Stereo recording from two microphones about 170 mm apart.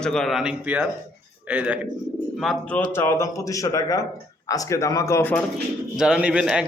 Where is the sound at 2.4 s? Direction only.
5° left (ahead or behind).